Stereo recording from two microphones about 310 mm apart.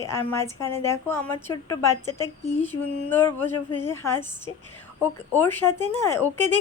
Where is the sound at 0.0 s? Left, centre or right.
Centre.